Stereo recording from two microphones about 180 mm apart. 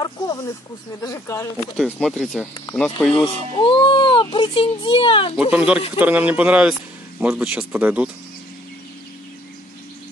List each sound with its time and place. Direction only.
0.0 s snake: 20° left (ahead or behind)
1.0 s speech: 15° left (ahead or behind)
1.9 s speech: 5° left (ahead or behind)
3.5 s a child's voice: 25° left (ahead or behind)
5.5 s speech: 5° right (ahead or behind)